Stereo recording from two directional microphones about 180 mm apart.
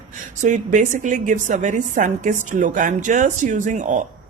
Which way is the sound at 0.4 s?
45° right (ahead or behind).